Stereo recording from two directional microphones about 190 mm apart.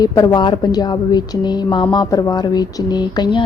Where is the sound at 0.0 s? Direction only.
20° left (ahead or behind).